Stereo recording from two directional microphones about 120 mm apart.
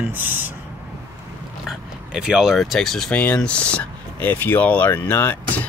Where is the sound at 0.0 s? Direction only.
15° right (ahead or behind).